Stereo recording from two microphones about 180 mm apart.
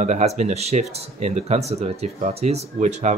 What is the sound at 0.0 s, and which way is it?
Speech, 40° right (ahead or behind).